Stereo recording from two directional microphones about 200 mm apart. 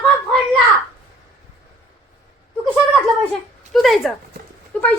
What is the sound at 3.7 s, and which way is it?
Speech, centre (ahead or behind).